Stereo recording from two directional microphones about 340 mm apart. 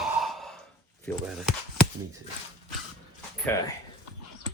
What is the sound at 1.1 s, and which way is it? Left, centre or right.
Speech, centre.